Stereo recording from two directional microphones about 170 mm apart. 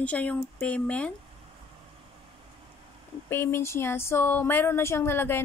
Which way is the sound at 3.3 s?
15° left (ahead or behind).